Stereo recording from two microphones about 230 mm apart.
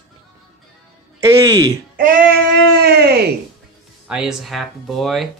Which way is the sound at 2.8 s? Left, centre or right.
Right.